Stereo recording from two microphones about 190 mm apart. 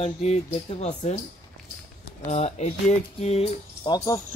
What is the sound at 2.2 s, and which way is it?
Speech, 35° left (ahead or behind).